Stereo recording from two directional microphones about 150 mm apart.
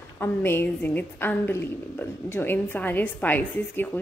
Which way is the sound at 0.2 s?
15° left (ahead or behind).